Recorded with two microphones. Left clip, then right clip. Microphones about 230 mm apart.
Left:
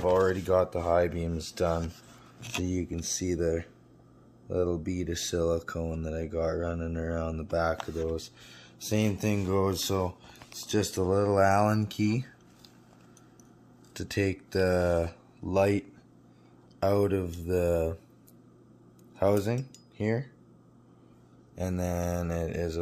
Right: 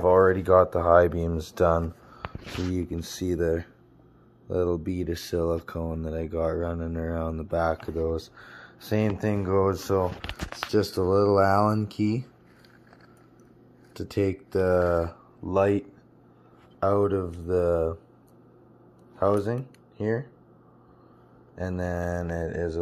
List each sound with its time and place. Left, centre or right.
0.0 s speech: centre
13.9 s speech: centre
16.8 s speech: centre
19.1 s speech: centre
21.9 s mantra: left
22.3 s speech: centre